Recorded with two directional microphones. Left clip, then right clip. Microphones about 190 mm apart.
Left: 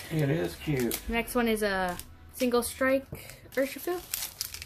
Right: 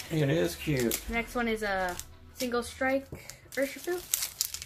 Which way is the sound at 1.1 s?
50° left (ahead or behind).